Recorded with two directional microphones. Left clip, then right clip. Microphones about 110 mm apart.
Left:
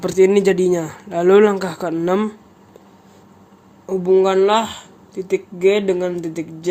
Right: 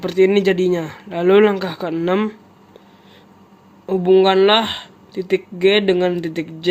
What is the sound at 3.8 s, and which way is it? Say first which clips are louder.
Speech: right 2 dB; 45° right (ahead or behind).